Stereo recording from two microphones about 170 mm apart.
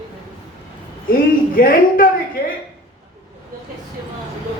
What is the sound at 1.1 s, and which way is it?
A man's voice, 55° left (ahead or behind).